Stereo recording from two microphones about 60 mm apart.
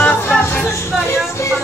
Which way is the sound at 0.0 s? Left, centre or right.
Left.